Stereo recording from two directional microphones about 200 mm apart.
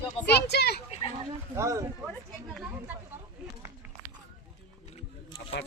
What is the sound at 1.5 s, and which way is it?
Speech, 15° right (ahead or behind).